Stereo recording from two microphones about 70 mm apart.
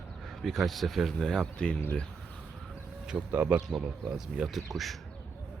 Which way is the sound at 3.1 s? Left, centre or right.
Right.